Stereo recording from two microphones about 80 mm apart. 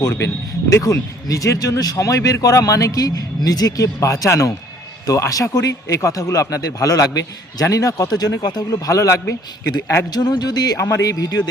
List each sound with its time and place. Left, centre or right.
0.0 s speech: left
8.9 s speech: left
10.1 s speech: left
10.8 s speech: left